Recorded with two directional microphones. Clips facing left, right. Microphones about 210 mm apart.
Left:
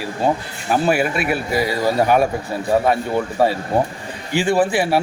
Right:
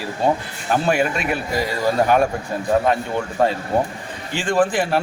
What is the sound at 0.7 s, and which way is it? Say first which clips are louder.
A man's voice: left 1 dB; 5° left (ahead or behind).